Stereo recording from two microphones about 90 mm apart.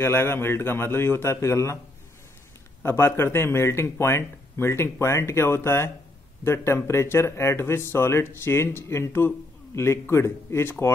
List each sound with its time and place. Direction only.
0.0 s speech: 25° left (ahead or behind)
2.8 s speech: 25° left (ahead or behind)